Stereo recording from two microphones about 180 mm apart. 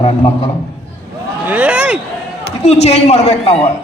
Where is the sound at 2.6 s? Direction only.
35° left (ahead or behind).